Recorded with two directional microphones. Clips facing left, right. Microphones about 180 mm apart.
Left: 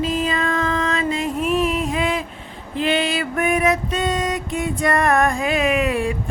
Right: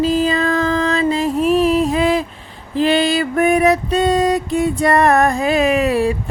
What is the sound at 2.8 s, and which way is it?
Female singing, 35° right (ahead or behind).